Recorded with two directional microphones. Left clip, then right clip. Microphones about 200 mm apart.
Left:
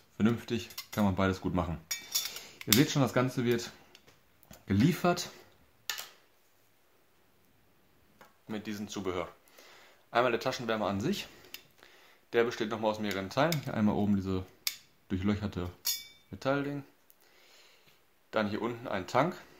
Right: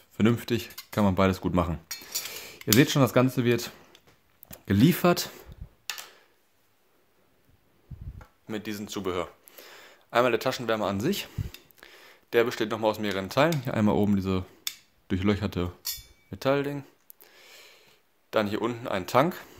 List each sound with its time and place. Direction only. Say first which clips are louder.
0.2 s speech: right 6 dB; 40° right (ahead or behind)
8.5 s speech: right 5 dB; 40° right (ahead or behind)
17.4 s a sound: right 9 dB; 45° right (ahead or behind)
18.3 s speech: right 6 dB; 45° right (ahead or behind)